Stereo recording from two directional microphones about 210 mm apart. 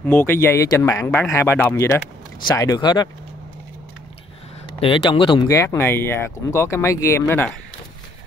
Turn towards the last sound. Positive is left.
turn(degrees=10)  # may be behind; listen again after turning